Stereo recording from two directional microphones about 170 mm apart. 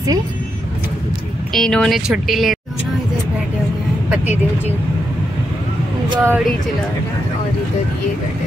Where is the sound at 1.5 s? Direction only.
Centre (ahead or behind).